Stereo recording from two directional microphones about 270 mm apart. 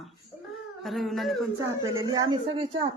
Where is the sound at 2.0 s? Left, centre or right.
Centre.